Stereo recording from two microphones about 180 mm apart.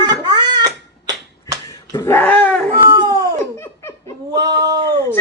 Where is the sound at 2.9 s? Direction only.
25° right (ahead or behind).